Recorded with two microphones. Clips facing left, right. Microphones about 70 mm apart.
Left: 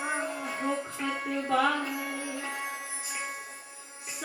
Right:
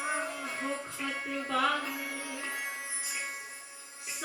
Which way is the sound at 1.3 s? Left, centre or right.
Left.